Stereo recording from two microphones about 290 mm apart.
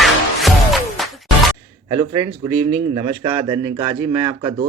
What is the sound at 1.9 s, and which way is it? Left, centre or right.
Speech, right.